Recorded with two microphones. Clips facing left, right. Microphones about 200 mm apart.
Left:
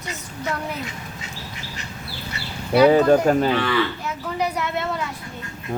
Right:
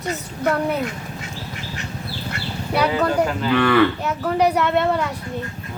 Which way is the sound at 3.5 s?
55° right (ahead or behind).